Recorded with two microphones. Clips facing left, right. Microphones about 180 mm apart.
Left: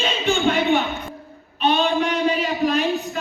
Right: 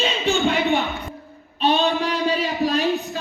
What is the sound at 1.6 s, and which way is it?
Child singing, 35° right (ahead or behind).